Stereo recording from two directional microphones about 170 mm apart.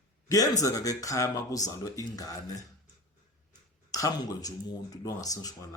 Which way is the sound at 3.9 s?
20° left (ahead or behind).